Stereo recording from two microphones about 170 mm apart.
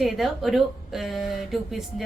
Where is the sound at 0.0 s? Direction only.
Centre (ahead or behind).